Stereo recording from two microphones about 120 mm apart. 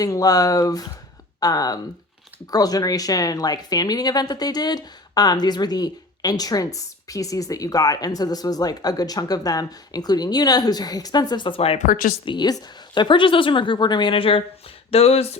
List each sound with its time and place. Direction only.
0.0 s speech: 30° left (ahead or behind); by 11.8 s 50° left (ahead or behind)
12.2 s a woman's voice: 40° left (ahead or behind)
14.8 s a sound: 55° left (ahead or behind)